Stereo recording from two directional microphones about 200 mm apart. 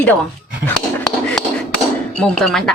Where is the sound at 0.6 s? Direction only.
5° left (ahead or behind).